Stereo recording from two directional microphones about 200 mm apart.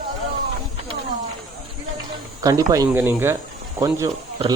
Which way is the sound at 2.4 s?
15° right (ahead or behind).